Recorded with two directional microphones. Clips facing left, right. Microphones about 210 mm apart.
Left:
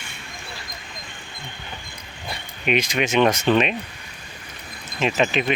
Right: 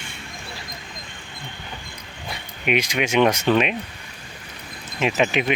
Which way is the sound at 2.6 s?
10° right (ahead or behind).